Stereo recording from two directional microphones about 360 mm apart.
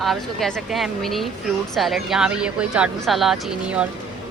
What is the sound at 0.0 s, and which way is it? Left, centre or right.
Speech, centre.